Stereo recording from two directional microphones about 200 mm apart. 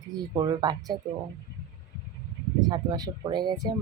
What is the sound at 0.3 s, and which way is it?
Speech, 20° right (ahead or behind).